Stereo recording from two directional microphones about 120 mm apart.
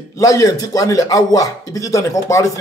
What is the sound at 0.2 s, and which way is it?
Speech, 30° left (ahead or behind).